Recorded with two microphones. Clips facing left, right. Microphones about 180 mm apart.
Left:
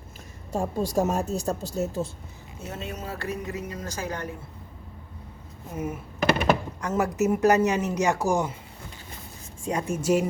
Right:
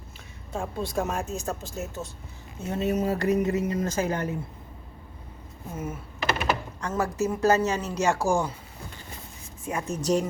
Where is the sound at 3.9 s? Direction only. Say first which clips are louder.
Right 5 dB; 25° right (ahead or behind).